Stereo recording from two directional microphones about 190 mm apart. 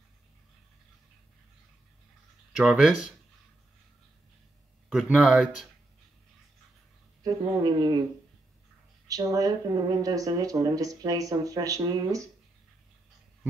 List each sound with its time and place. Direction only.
2.5 s a man's voice: 5° right (ahead or behind)
4.8 s a man's voice: 5° right (ahead or behind)
7.2 s speech: 20° right (ahead or behind)
9.0 s speech: 20° right (ahead or behind)